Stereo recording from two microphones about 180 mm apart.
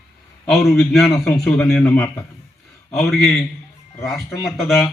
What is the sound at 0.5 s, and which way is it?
A man's voice, centre (ahead or behind).